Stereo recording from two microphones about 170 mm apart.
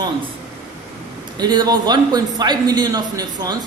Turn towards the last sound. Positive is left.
turn(degrees=-25)  # may be behind; listen again after turning